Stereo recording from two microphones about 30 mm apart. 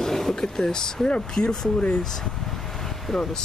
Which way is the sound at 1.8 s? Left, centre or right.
Left.